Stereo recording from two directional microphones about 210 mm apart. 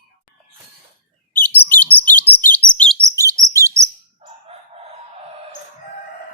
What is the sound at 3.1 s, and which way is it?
Chirp, 15° right (ahead or behind).